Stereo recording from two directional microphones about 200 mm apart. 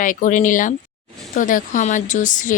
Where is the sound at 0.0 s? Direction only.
40° left (ahead or behind).